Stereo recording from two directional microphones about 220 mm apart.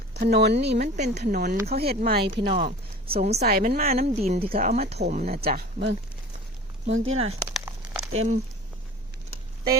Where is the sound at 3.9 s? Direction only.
30° right (ahead or behind); by 5.9 s 50° right (ahead or behind).